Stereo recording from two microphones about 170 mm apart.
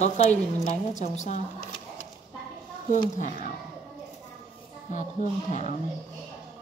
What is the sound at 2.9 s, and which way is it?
Speech, 50° left (ahead or behind).